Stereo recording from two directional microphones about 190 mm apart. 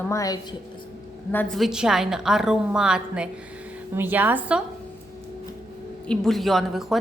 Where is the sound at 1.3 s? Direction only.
5° left (ahead or behind).